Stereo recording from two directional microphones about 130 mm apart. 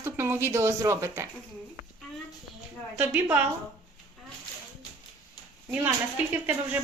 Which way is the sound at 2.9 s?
10° right (ahead or behind).